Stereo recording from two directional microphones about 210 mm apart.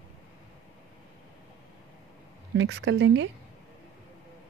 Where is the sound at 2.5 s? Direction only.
55° right (ahead or behind).